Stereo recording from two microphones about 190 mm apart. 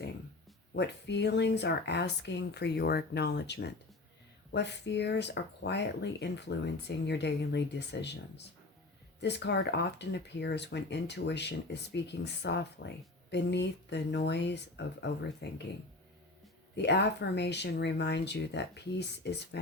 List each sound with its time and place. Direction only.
0.7 s speech: 65° left (ahead or behind)
9.2 s speech: 65° left (ahead or behind)
16.7 s speech: 65° left (ahead or behind)